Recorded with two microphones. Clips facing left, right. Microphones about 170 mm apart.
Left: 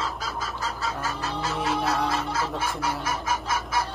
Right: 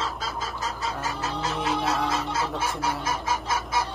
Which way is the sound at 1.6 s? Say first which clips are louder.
Left 1 dB; centre (ahead or behind).